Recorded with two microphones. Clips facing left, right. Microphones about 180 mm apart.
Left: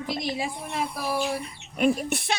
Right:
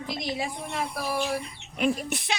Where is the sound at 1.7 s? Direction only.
50° left (ahead or behind).